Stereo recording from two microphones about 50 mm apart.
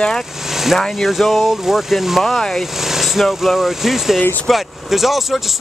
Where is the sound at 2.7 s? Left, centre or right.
Centre.